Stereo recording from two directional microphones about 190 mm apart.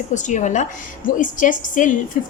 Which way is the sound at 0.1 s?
40° left (ahead or behind).